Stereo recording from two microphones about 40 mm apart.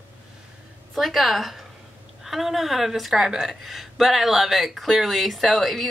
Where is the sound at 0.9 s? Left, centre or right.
Centre.